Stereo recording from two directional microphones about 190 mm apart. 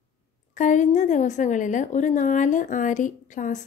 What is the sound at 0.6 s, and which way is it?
A woman's voice, 40° left (ahead or behind).